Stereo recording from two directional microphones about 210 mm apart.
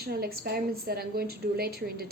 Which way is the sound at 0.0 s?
50° right (ahead or behind).